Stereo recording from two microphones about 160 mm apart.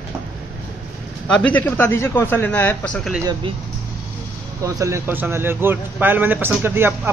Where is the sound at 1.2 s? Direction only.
5° left (ahead or behind).